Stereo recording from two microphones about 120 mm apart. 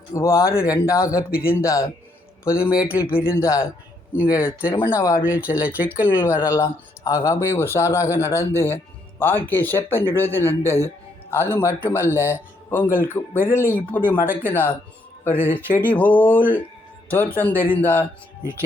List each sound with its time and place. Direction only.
0.1 s a man's voice: 25° left (ahead or behind)
5.5 s speech: 10° right (ahead or behind)
6.1 s speech: 20° left (ahead or behind)